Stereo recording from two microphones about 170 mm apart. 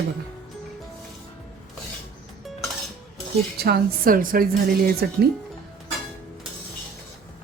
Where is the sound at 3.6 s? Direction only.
65° right (ahead or behind).